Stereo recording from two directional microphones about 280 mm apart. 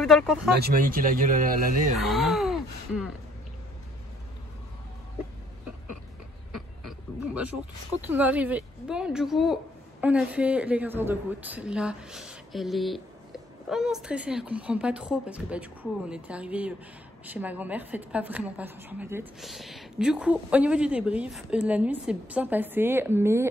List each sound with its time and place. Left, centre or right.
0.0 s speech: centre
0.6 s speech: right
2.0 s groan: centre
6.5 s oink: centre
8.1 s a woman's voice: centre